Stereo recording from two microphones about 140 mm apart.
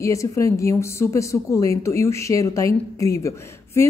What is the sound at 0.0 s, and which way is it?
A woman's voice, 20° left (ahead or behind).